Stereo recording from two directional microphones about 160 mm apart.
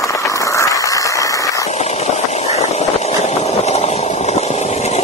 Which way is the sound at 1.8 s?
45° left (ahead or behind).